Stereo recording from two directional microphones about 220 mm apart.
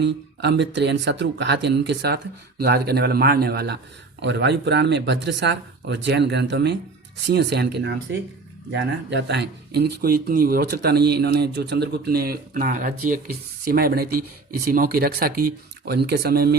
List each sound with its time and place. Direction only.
0.0 s speech: 50° right (ahead or behind)